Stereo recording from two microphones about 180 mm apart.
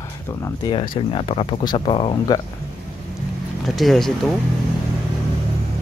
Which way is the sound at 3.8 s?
Centre (ahead or behind).